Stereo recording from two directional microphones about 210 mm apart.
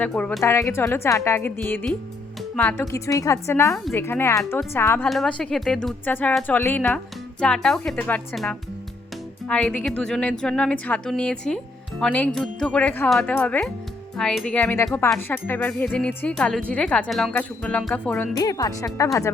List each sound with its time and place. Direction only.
0.0 s speech: 5° left (ahead or behind)
5.0 s speech: centre (ahead or behind)